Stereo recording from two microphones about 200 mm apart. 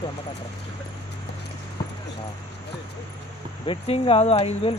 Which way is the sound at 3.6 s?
30° left (ahead or behind).